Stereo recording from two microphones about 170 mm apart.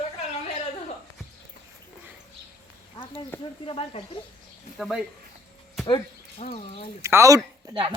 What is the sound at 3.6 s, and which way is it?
Speech, 35° left (ahead or behind).